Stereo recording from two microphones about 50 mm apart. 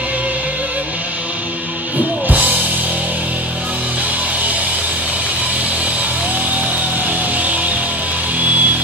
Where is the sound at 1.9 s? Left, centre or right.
Right.